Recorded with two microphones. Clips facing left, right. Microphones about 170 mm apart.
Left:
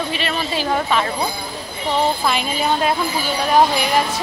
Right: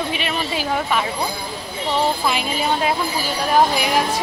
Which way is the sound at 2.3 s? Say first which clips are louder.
Left 1 dB; 5° right (ahead or behind).